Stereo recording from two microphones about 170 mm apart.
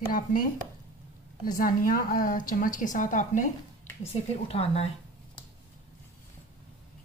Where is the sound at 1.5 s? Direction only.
55° left (ahead or behind).